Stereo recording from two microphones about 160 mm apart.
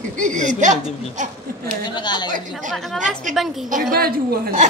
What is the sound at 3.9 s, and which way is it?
Speech, 70° right (ahead or behind).